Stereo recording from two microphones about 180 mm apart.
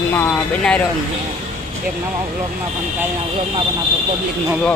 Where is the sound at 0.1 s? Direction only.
10° left (ahead or behind).